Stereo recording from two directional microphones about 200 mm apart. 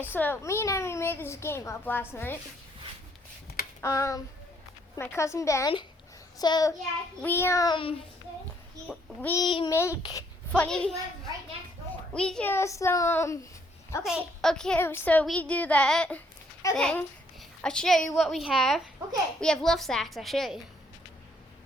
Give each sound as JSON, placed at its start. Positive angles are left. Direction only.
{"t": 0.1, "sound": "a child's voice", "side_deg": 10}
{"t": 3.8, "sound": "a sound", "side_deg": 15}
{"t": 4.9, "sound": "a child's voice", "side_deg": 15}
{"t": 6.4, "sound": "child singing", "side_deg": 20}
{"t": 7.2, "sound": "a child's voice", "side_deg": 10}
{"t": 9.4, "sound": "child singing", "side_deg": 25}
{"t": 9.7, "sound": "a child's voice", "side_deg": 15}
{"t": 10.0, "sound": "child singing", "side_deg": 20}
{"t": 10.5, "sound": "a woman's voice", "side_deg": 5}
{"t": 12.1, "sound": "a child's voice", "side_deg": 5}
{"t": 14.0, "sound": "a woman's voice", "side_deg": 0}